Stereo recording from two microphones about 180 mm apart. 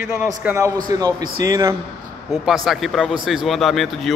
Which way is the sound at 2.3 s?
Centre (ahead or behind).